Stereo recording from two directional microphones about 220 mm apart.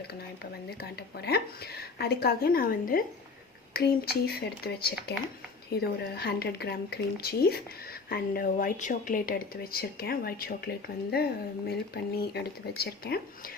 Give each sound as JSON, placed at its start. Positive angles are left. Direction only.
{"t": 0.8, "sound": "speech", "side_deg": 45}